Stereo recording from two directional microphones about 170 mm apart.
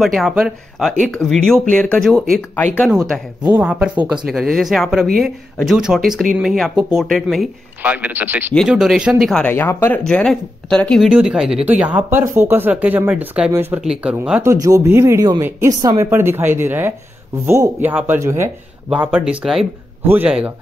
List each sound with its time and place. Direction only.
0.0 s speech: centre (ahead or behind)
3.5 s speech: 5° right (ahead or behind)
7.8 s speech: 10° right (ahead or behind)
9.2 s speech: 5° left (ahead or behind)